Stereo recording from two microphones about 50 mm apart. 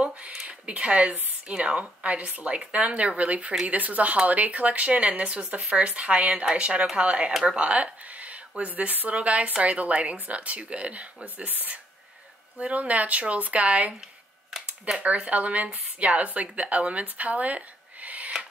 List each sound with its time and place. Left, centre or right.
0.0 s a sound: right
1.5 s speech: right
15.0 s speech: right